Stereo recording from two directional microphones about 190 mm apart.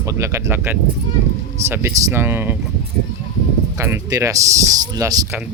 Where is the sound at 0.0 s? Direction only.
15° right (ahead or behind).